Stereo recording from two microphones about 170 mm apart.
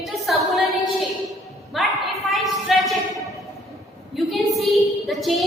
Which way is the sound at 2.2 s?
Centre (ahead or behind).